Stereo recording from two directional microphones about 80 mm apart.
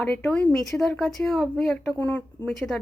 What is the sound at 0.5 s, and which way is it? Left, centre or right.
Speech, centre.